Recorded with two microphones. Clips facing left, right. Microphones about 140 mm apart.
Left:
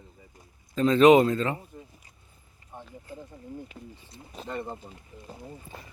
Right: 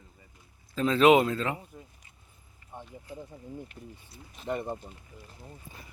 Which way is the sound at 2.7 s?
20° right (ahead or behind).